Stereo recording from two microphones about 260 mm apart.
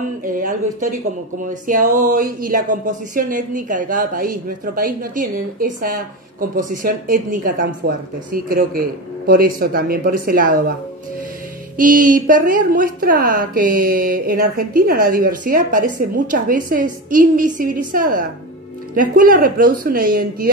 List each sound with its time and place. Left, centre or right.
0.2 s speech: right
11.7 s speech: right